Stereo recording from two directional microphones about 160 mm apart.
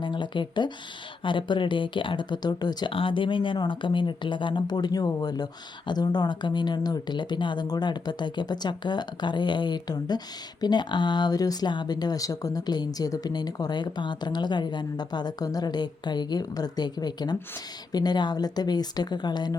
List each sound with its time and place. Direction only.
0.0 s speech: 30° left (ahead or behind)